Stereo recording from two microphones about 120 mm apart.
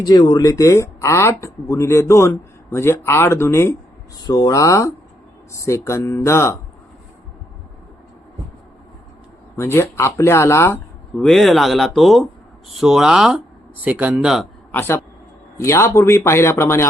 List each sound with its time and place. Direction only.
0.0 s speech: 35° left (ahead or behind); by 3.8 s 20° left (ahead or behind)
4.3 s speech: 30° left (ahead or behind)
9.6 s speech: 20° left (ahead or behind)
11.2 s speech: centre (ahead or behind)
14.7 s speech: 20° left (ahead or behind)